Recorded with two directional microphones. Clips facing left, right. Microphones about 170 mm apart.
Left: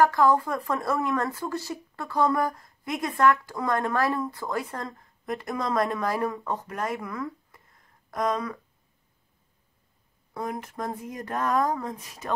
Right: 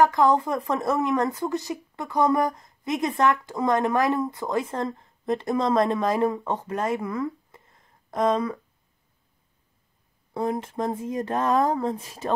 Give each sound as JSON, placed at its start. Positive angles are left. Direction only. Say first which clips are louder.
{"t": 0.0, "sound": "speech", "louder": "right 1 dB", "side_deg": -20}
{"t": 10.3, "sound": "speech", "louder": "right 6 dB", "side_deg": -25}